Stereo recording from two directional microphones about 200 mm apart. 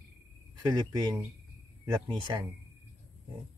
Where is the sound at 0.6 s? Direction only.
20° right (ahead or behind).